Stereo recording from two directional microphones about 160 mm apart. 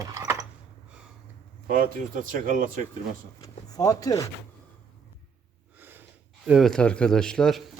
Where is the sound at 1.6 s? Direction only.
55° right (ahead or behind).